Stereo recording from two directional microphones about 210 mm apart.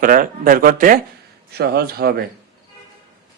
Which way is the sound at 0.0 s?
40° right (ahead or behind).